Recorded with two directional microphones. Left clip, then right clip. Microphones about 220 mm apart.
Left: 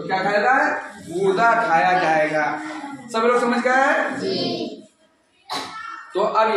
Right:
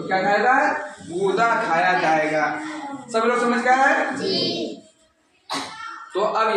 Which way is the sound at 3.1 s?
20° left (ahead or behind).